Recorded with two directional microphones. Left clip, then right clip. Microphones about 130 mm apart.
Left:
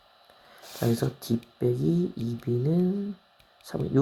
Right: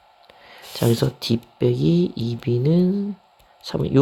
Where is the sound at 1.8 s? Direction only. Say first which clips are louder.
Right 7 dB; 40° right (ahead or behind).